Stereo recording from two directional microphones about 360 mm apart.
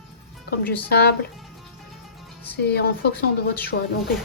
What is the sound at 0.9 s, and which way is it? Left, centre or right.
Speech, left.